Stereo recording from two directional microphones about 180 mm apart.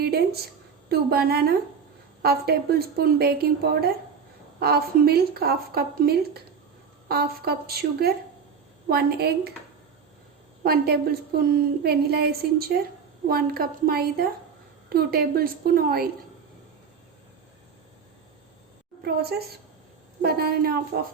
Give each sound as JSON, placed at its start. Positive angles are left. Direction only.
{"t": 0.0, "sound": "a woman's voice", "side_deg": -60}
{"t": 10.6, "sound": "a woman's voice", "side_deg": -60}
{"t": 20.2, "sound": "a woman's voice", "side_deg": -60}